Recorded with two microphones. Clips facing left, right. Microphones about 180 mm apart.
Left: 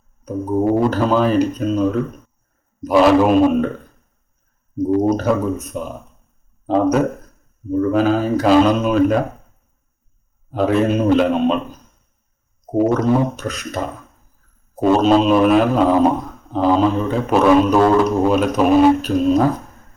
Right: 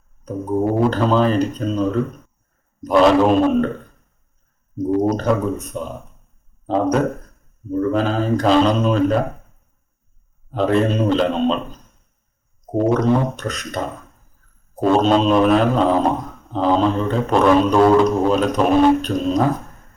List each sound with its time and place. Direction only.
0.3 s speech: 5° left (ahead or behind)
4.8 s speech: 10° left (ahead or behind)
7.7 s speech: 5° left (ahead or behind)
10.5 s a man's voice: 5° left (ahead or behind)